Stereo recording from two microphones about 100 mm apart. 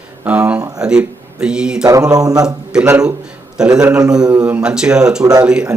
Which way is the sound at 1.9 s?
35° right (ahead or behind).